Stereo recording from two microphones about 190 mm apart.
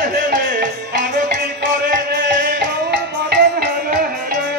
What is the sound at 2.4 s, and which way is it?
Music, 60° right (ahead or behind).